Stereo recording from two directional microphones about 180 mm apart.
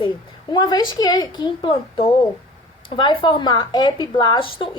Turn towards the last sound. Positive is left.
turn(degrees=25)  # may be behind; listen again after turning